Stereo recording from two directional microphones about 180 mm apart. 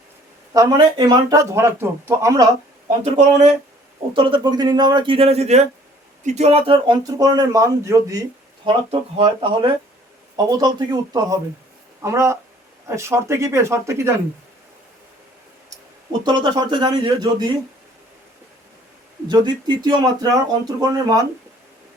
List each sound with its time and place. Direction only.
0.5 s speech: 20° right (ahead or behind)
3.0 s speech: 40° right (ahead or behind)
4.1 s speech: 25° right (ahead or behind)
8.6 s speech: 30° right (ahead or behind)
16.2 s speech: 25° right (ahead or behind)
19.3 s speech: 25° right (ahead or behind)